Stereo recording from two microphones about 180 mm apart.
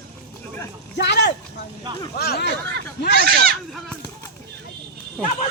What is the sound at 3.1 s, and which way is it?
Speech, 60° right (ahead or behind).